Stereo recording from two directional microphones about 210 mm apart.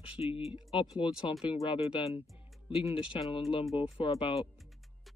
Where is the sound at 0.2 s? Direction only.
25° left (ahead or behind).